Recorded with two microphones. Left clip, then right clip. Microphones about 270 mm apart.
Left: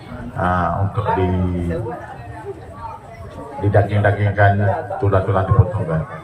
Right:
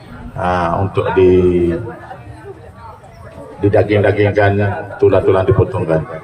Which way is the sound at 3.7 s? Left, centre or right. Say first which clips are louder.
Right 5 dB; right.